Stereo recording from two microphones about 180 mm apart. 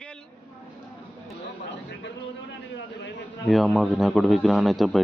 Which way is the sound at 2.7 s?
80° left.